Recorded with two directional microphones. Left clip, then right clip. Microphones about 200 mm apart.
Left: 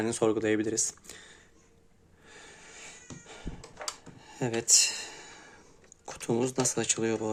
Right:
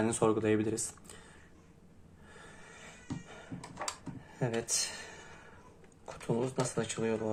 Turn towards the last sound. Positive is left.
turn(degrees=55)  # may be behind; listen again after turning